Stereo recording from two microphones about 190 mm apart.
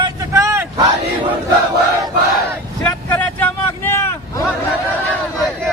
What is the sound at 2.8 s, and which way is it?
Vehicle, 10° left (ahead or behind).